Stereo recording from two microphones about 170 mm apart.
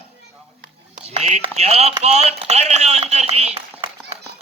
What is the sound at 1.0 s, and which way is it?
A man's voice, 40° right (ahead or behind).